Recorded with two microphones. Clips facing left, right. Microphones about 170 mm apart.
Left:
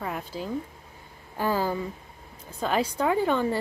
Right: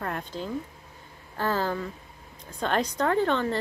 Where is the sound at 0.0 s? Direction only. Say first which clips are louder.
Even; 5° left (ahead or behind).